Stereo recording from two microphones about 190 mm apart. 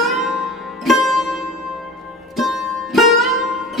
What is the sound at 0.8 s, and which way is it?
Music, centre (ahead or behind).